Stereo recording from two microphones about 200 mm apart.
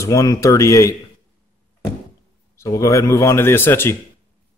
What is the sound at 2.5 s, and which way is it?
A man's voice, 15° left (ahead or behind).